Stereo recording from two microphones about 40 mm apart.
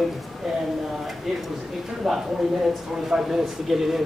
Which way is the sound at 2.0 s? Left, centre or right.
Centre.